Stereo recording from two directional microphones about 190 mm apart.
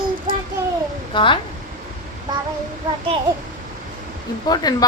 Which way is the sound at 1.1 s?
25° left (ahead or behind).